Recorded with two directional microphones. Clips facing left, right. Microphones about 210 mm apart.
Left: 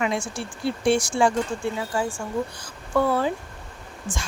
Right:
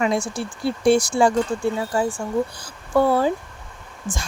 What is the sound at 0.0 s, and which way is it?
Speech, 40° right (ahead or behind).